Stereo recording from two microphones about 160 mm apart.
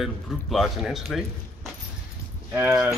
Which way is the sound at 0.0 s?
Centre (ahead or behind).